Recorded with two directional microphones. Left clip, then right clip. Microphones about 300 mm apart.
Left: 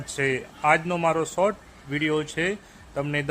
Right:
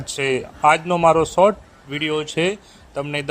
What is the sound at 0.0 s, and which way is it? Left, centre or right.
A man's voice, centre.